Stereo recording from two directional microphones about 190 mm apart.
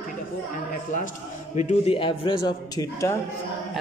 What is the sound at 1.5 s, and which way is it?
A man's voice, 35° left (ahead or behind).